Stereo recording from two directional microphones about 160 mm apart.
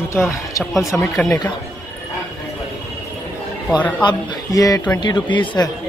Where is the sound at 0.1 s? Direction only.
15° left (ahead or behind).